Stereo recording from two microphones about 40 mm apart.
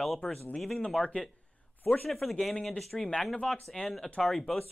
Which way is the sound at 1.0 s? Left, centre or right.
Centre.